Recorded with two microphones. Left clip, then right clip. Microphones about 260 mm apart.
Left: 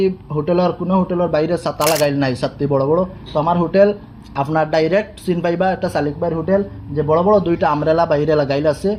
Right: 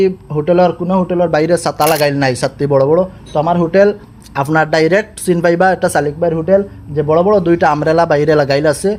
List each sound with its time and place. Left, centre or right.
0.0 s speech: right
1.8 s speech: centre
2.0 s speech: right